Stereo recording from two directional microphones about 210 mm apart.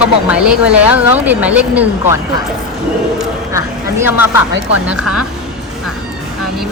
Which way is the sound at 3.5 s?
10° right (ahead or behind).